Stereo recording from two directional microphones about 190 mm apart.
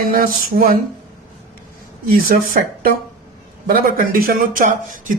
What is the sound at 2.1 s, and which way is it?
Speech, 50° right (ahead or behind).